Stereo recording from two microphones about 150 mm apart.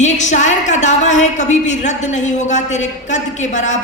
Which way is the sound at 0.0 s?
50° left (ahead or behind).